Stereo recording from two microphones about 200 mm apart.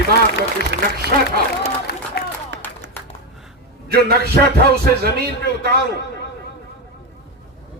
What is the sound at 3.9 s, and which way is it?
A man's voice, 50° right (ahead or behind).